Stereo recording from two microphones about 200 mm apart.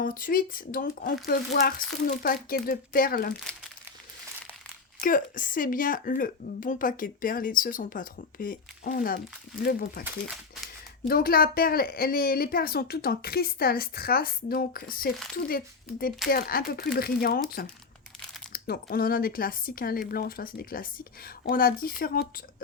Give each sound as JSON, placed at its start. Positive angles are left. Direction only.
{"t": 0.0, "sound": "speech", "side_deg": 45}
{"t": 4.9, "sound": "speech", "side_deg": 45}
{"t": 10.0, "sound": "speech", "side_deg": 0}
{"t": 11.1, "sound": "speech", "side_deg": 45}
{"t": 18.5, "sound": "speech", "side_deg": 50}